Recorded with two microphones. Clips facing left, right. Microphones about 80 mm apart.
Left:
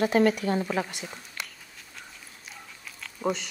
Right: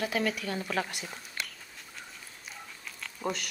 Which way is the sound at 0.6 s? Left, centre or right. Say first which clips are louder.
Left 3 dB; centre.